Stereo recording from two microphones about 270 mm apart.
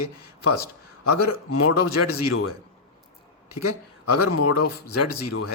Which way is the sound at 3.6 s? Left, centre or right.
Left.